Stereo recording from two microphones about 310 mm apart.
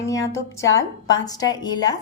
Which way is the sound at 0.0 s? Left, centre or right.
Centre.